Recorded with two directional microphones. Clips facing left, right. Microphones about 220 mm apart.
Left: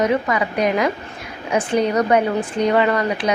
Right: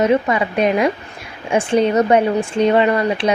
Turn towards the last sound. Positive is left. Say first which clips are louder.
# right 3 dB
turn(degrees=-25)  # may be behind; listen again after turning